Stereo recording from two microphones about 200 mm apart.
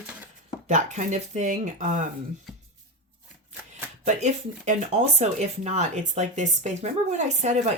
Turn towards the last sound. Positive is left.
turn(degrees=-35)  # may be behind; listen again after turning